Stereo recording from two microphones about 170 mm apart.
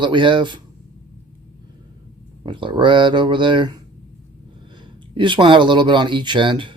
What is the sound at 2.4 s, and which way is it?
Speech, 30° right (ahead or behind).